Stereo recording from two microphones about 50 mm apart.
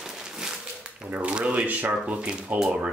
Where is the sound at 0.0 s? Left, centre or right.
Centre; by 2.1 s right.